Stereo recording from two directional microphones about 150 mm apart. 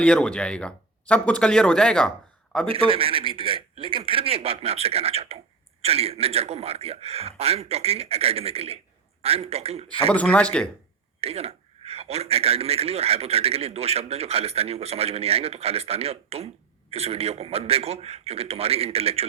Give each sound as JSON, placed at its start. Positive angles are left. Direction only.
{"t": 0.0, "sound": "speech", "side_deg": 5}
{"t": 2.6, "sound": "a man's voice", "side_deg": -35}
{"t": 10.1, "sound": "speech", "side_deg": 10}
{"t": 11.2, "sound": "a man's voice", "side_deg": -40}